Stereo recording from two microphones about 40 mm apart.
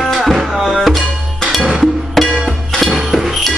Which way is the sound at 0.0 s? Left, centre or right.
Centre.